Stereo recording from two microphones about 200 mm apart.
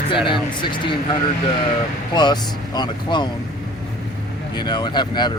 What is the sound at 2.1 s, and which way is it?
Speech, 20° left (ahead or behind).